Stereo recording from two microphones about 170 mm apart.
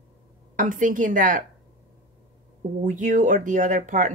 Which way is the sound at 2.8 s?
50° right (ahead or behind).